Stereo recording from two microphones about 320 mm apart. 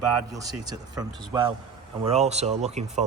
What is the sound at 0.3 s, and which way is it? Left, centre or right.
Speech, centre.